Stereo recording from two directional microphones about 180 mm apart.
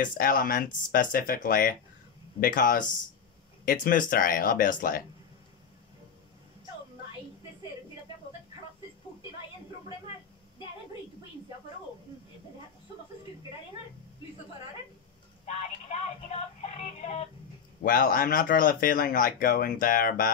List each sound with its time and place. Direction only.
0.0 s speech: 50° left (ahead or behind)
15.4 s music: 40° left (ahead or behind)
17.8 s speech: 50° left (ahead or behind)